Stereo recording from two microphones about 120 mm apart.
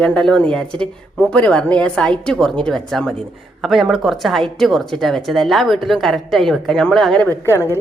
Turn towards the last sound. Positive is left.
turn(degrees=20)  # may be behind; listen again after turning